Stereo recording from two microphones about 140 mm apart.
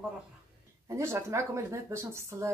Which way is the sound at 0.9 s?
20° right (ahead or behind).